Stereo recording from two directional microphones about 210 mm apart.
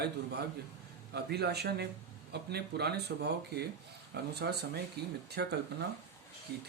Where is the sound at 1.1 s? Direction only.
50° right (ahead or behind).